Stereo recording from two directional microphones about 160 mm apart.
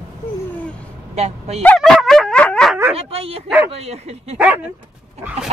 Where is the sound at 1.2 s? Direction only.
40° right (ahead or behind).